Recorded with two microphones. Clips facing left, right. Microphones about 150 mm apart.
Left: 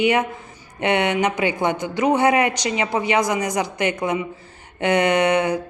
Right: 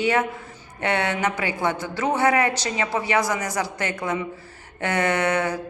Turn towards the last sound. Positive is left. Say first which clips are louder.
# left 4 dB
turn(degrees=20)  # may be behind; listen again after turning